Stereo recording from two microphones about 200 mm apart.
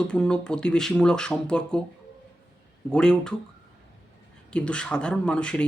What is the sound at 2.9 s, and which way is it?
Speech, 5° left (ahead or behind).